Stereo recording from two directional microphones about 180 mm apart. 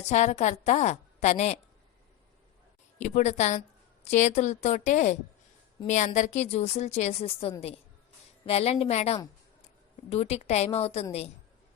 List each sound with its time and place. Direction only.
0.0 s a woman's voice: 40° left (ahead or behind)
3.0 s a woman's voice: 40° left (ahead or behind)